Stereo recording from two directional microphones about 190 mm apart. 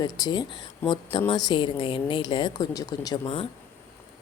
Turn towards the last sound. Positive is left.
turn(degrees=25)  # may be behind; listen again after turning